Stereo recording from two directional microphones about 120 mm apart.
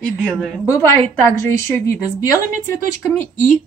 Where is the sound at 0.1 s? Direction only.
15° right (ahead or behind).